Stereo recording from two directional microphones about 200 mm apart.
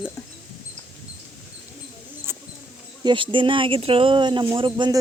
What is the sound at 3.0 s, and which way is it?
Speech, 25° right (ahead or behind).